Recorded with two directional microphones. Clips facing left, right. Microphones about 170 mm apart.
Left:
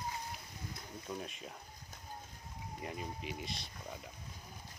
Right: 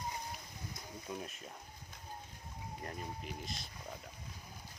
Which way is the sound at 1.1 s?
5° right (ahead or behind).